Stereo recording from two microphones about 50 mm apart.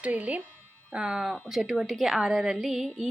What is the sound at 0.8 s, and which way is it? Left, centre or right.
Speech, centre.